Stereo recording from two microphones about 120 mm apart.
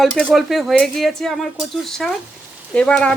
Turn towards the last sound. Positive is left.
turn(degrees=10)  # may be behind; listen again after turning